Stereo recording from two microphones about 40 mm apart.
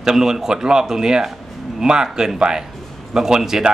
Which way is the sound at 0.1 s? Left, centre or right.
Centre.